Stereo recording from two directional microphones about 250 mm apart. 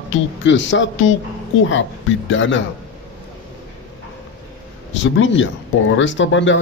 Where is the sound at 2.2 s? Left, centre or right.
Left.